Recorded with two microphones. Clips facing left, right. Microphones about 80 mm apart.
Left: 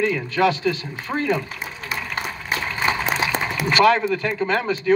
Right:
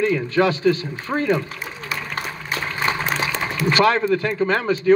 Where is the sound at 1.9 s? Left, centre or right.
Left.